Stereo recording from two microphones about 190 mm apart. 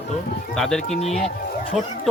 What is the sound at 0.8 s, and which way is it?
Speech, 35° left (ahead or behind).